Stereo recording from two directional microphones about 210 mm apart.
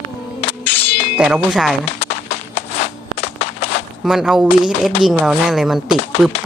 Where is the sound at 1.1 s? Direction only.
5° right (ahead or behind).